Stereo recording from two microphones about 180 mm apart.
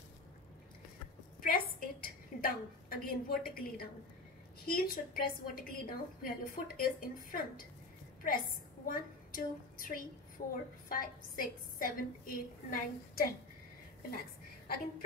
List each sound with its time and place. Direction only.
1.4 s a woman's voice: 55° left (ahead or behind)